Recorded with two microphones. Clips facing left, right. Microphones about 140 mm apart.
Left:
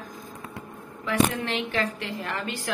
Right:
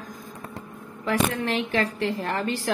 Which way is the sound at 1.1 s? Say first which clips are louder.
Even; 40° right (ahead or behind).